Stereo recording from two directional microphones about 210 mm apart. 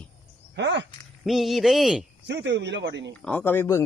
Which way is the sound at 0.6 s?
55° right (ahead or behind).